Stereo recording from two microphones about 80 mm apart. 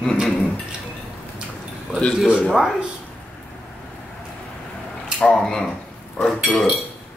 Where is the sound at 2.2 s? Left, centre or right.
Centre.